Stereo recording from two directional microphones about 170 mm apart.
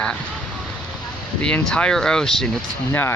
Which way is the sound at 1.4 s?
5° left (ahead or behind).